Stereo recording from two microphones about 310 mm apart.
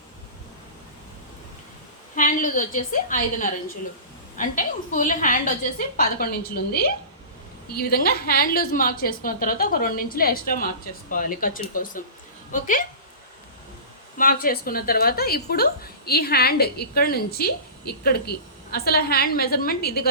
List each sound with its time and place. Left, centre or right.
2.1 s a woman's voice: left
14.2 s a woman's voice: left